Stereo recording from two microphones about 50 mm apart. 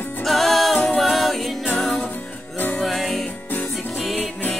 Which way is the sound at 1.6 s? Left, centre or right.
Centre.